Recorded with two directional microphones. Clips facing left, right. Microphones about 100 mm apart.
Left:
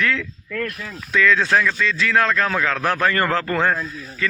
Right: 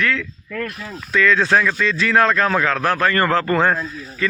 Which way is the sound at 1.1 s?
Centre (ahead or behind).